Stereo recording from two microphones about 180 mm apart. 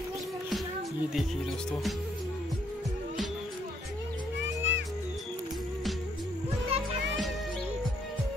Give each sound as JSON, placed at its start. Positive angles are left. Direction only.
{"t": 1.7, "sound": "speech", "side_deg": 0}
{"t": 4.4, "sound": "music", "side_deg": -80}
{"t": 6.7, "sound": "music", "side_deg": -35}